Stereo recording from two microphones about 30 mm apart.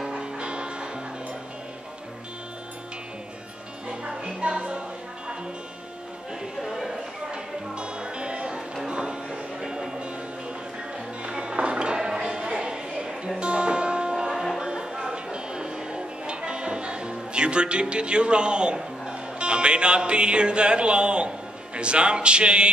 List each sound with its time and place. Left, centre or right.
0.1 s music: right
3.9 s music: right
6.6 s a sound: centre
7.2 s music: right
11.2 s music: right
21.7 s speech: right